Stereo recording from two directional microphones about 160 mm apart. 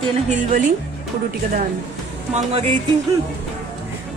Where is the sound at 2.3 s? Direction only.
45° right (ahead or behind).